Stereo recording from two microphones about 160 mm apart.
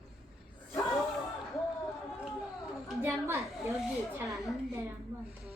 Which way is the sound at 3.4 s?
Centre (ahead or behind).